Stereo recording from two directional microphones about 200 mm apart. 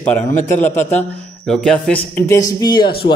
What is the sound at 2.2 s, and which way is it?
Speech, 15° left (ahead or behind).